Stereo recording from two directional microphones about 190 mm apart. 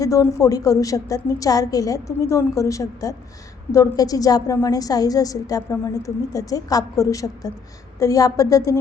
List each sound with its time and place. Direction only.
0.0 s a woman's voice: 15° left (ahead or behind)